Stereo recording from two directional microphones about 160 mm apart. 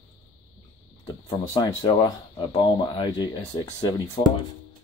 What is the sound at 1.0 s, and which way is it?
Speech, 25° left (ahead or behind).